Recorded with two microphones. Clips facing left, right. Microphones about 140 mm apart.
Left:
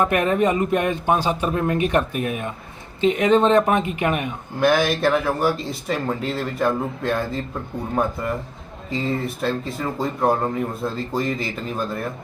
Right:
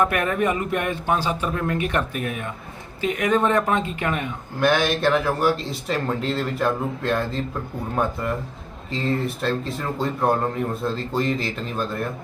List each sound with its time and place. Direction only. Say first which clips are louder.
0.0 s speech: left 2 dB; 20° left (ahead or behind)
4.6 s speech: left 2 dB; centre (ahead or behind)
8.9 s speech: even; centre (ahead or behind)